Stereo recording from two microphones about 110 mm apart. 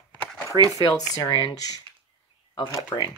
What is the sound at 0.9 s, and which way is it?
Speech, 35° left (ahead or behind).